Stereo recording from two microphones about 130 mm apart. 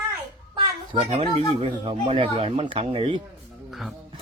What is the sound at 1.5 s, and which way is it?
Speech, 45° right (ahead or behind).